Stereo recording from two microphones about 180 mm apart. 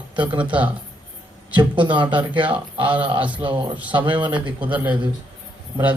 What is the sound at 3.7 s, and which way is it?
Speech, 10° right (ahead or behind).